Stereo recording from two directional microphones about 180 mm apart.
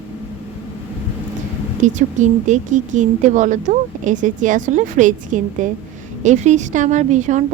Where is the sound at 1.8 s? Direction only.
45° right (ahead or behind).